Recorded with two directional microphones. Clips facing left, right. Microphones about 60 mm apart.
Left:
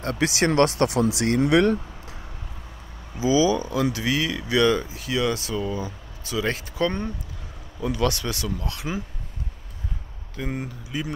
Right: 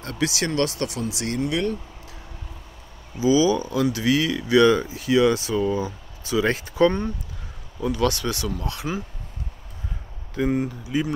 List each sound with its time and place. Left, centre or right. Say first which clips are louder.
0.0 s speech: left 3 dB; left
0.9 s speech: left 7 dB; left
1.4 s speech: left 6 dB; left
3.2 s speech: right 1 dB; centre
10.5 s speech: right 7 dB; centre